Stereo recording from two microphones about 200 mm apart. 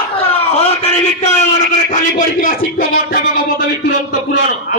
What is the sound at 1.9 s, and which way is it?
Speech, 40° left (ahead or behind).